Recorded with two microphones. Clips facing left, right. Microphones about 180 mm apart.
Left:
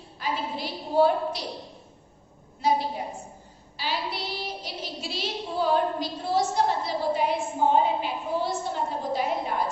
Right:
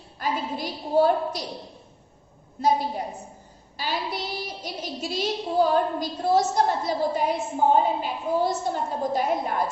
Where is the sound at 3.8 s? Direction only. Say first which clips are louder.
Right 2 dB; 45° right (ahead or behind).